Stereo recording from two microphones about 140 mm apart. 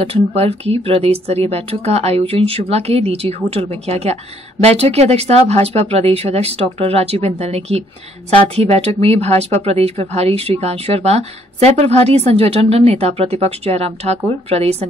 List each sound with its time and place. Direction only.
0.0 s speech: 45° right (ahead or behind)